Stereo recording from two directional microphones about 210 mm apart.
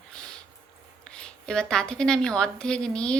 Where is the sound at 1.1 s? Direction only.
5° left (ahead or behind).